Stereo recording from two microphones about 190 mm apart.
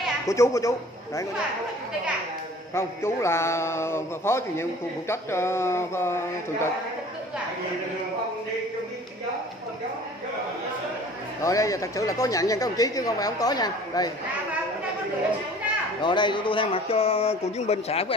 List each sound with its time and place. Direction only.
0.3 s a man's voice: 15° left (ahead or behind)
2.7 s a man's voice: 15° left (ahead or behind)
11.4 s a man's voice: 15° left (ahead or behind)
16.0 s speech: 25° left (ahead or behind)